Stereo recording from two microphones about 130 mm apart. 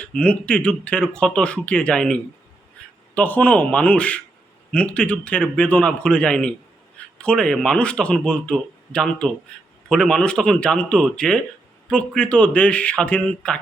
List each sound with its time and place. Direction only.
0.0 s speech: 10° left (ahead or behind)